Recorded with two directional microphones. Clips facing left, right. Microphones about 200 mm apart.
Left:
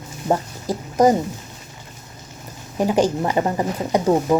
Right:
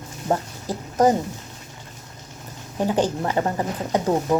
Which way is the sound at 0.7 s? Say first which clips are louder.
Left 3 dB; 15° left (ahead or behind).